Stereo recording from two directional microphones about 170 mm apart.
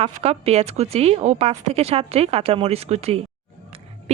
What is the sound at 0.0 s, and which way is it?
Speech, 35° right (ahead or behind).